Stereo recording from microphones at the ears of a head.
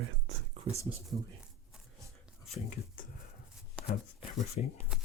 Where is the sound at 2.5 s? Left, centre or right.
Left.